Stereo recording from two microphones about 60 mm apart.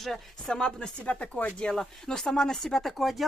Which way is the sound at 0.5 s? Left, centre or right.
Centre.